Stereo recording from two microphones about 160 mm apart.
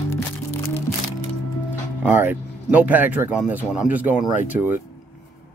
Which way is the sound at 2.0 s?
10° right (ahead or behind).